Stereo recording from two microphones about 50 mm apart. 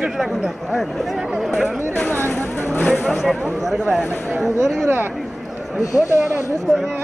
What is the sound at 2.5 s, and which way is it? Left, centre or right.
Vehicle, left.